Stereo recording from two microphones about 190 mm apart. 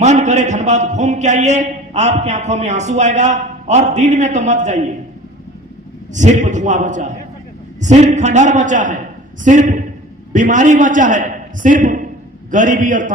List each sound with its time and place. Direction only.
0.0 s a man's voice: 35° right (ahead or behind)
6.1 s a man's voice: 40° right (ahead or behind)